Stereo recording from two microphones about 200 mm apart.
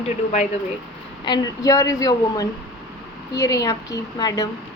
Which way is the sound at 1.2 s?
20° left (ahead or behind).